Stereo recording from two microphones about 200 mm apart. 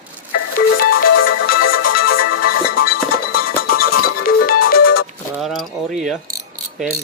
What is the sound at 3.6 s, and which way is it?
Music, 45° left (ahead or behind).